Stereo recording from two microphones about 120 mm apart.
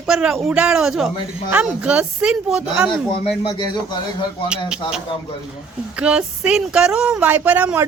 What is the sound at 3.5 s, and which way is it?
Speech, 35° left (ahead or behind).